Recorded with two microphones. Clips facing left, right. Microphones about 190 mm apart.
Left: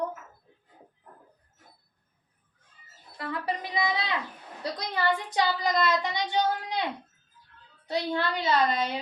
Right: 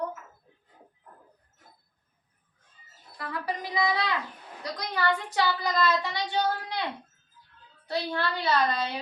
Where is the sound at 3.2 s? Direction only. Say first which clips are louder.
Left 1 dB; 25° left (ahead or behind).